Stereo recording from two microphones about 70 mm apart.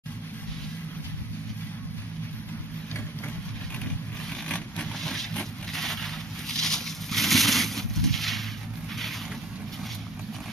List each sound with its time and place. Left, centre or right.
4.5 s vehicle: centre